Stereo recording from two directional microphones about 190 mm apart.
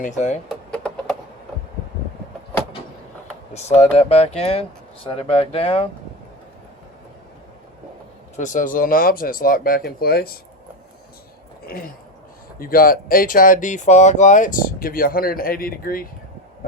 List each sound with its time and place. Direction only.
0.0 s speech: 40° left (ahead or behind)
0.7 s a sound: 5° left (ahead or behind)
3.5 s speech: 35° left (ahead or behind)
8.4 s speech: 40° left (ahead or behind)
11.6 s a sound: 50° left (ahead or behind)
12.5 s speech: 50° left (ahead or behind)